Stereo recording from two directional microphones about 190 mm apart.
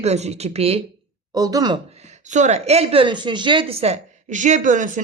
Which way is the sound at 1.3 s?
20° right (ahead or behind).